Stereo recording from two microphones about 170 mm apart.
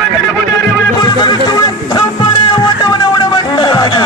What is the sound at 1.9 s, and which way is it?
Music, 25° left (ahead or behind).